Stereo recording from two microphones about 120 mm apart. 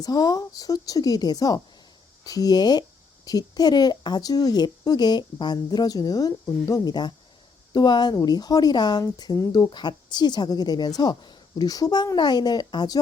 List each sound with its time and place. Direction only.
0.0 s speech: 30° left (ahead or behind)